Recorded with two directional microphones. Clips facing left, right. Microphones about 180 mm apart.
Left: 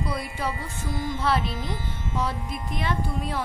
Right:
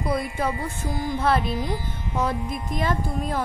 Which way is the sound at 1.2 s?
50° right (ahead or behind).